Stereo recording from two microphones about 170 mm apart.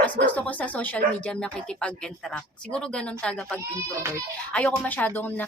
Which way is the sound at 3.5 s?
15° right (ahead or behind).